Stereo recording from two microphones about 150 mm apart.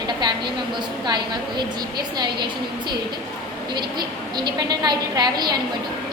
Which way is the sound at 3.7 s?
30° right (ahead or behind).